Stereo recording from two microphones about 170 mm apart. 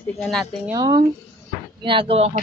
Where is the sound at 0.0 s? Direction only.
5° left (ahead or behind).